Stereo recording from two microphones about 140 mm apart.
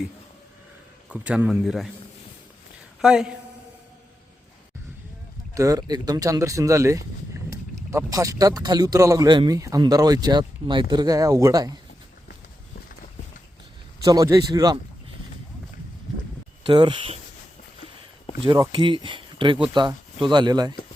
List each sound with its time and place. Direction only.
1.1 s speech: 10° right (ahead or behind)
3.0 s speech: 5° right (ahead or behind)
5.5 s speech: 25° right (ahead or behind)
14.0 s speech: 25° right (ahead or behind)
16.6 s speech: 35° right (ahead or behind)
18.4 s speech: 30° right (ahead or behind)